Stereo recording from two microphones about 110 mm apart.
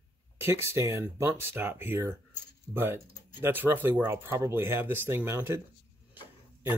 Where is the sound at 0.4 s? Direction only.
20° right (ahead or behind).